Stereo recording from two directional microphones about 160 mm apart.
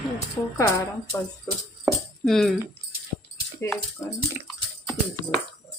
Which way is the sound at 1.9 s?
Centre (ahead or behind).